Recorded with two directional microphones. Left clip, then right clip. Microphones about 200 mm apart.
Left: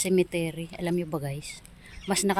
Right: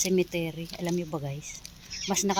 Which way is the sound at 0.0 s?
10° left (ahead or behind).